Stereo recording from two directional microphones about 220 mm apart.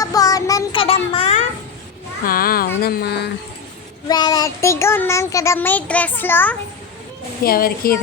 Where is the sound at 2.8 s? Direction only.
45° left (ahead or behind).